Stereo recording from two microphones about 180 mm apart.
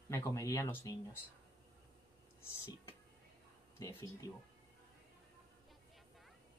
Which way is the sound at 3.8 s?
20° left (ahead or behind).